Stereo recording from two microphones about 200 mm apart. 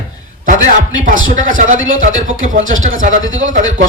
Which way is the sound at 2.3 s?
75° right (ahead or behind).